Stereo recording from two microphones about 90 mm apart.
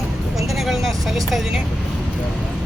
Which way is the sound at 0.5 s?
Centre (ahead or behind).